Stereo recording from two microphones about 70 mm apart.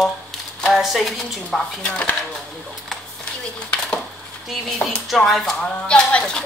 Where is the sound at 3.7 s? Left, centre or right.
Centre.